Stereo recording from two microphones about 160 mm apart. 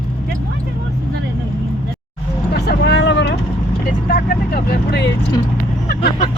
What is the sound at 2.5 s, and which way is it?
Vehicle, 90° left.